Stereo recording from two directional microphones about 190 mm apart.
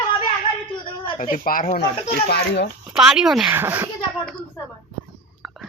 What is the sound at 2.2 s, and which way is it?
Speech, 60° left (ahead or behind).